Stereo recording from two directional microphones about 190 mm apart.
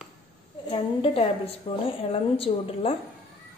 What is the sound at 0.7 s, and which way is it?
A woman's voice, 30° left (ahead or behind).